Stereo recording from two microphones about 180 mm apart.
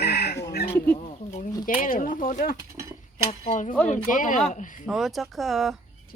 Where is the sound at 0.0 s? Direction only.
65° left (ahead or behind).